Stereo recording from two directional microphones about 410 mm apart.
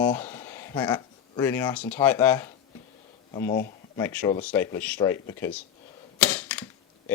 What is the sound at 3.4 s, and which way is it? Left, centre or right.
Speech, left.